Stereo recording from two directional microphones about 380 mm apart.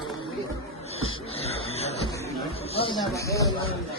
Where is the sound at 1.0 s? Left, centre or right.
Centre.